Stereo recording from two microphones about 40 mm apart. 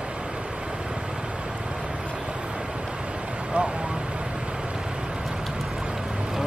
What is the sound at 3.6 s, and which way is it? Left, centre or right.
Vehicle, right.